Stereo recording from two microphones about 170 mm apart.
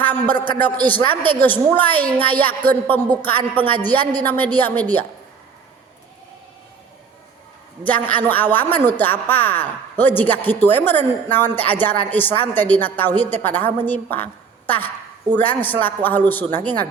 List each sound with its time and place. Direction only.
0.0 s a sound: 10° left (ahead or behind)
1.2 s a woman's voice: 10° left (ahead or behind)
7.9 s a woman's voice: 10° left (ahead or behind)
15.3 s a woman's voice: 10° left (ahead or behind)